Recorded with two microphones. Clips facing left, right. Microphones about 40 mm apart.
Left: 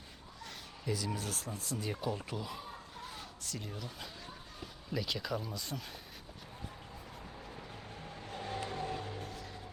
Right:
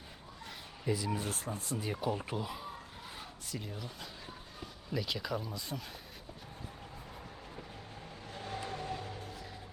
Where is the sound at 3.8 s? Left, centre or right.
Centre.